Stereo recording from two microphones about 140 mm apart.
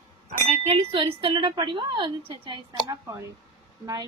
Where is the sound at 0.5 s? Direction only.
45° right (ahead or behind).